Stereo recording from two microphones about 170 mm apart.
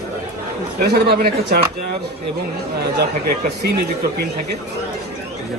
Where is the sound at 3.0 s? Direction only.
70° right (ahead or behind).